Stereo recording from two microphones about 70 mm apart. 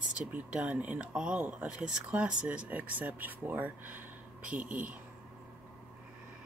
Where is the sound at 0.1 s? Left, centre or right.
Centre.